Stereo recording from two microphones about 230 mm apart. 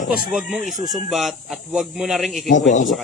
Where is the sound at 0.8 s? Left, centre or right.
Centre.